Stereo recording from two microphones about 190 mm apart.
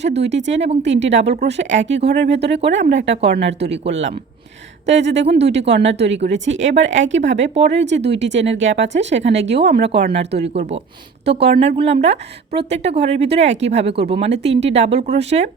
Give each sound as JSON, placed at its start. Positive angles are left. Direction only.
{"t": 0.0, "sound": "speech", "side_deg": -65}
{"t": 3.2, "sound": "speech", "side_deg": -60}
{"t": 11.3, "sound": "speech", "side_deg": -60}
{"t": 11.6, "sound": "a woman's voice", "side_deg": -35}